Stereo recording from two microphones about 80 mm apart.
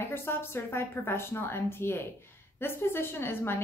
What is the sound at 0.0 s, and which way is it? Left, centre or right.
A woman's voice, left.